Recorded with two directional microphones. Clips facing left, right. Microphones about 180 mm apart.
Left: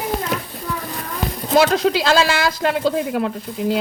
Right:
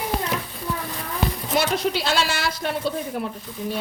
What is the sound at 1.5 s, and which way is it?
Speech, 90° left.